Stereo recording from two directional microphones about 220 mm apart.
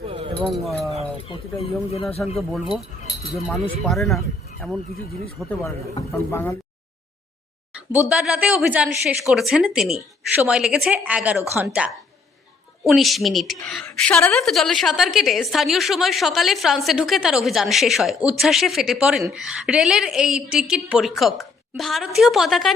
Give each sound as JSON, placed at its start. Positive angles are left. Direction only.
{"t": 0.0, "sound": "keys jangling", "side_deg": -25}
{"t": 0.5, "sound": "a woman's voice", "side_deg": 0}
{"t": 1.9, "sound": "speech", "side_deg": 25}
{"t": 2.2, "sound": "a woman's voice", "side_deg": 0}
{"t": 3.8, "sound": "a woman's voice", "side_deg": 0}
{"t": 7.9, "sound": "a woman's voice", "side_deg": -5}